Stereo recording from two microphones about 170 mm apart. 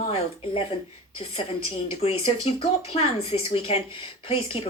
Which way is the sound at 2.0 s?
35° left (ahead or behind).